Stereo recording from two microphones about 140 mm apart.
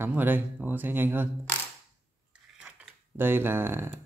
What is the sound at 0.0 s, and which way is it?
Speech, 15° right (ahead or behind).